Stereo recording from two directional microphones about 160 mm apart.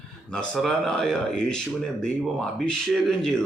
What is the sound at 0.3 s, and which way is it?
Speech, 5° left (ahead or behind).